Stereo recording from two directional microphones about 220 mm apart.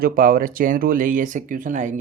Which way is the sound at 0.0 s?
40° right (ahead or behind).